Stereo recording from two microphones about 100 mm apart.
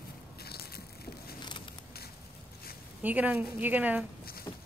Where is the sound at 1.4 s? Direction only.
55° left (ahead or behind).